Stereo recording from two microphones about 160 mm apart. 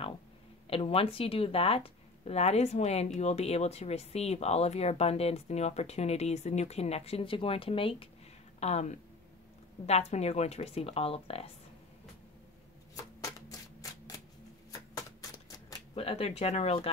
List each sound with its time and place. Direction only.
0.7 s speech: 35° left (ahead or behind)
12.9 s shuffling cards: 20° left (ahead or behind)
15.9 s speech: 40° left (ahead or behind)